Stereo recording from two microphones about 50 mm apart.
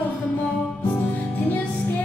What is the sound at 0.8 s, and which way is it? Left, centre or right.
Music, left.